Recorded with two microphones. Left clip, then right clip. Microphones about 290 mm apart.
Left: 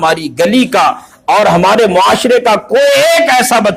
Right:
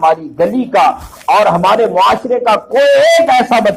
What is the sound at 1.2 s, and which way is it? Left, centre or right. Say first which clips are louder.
A man's voice: left 1 dB; left.